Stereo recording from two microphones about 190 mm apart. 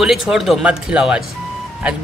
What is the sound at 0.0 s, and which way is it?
Speech, centre (ahead or behind).